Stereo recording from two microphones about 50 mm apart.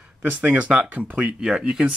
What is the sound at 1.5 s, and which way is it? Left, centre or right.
Speech, centre.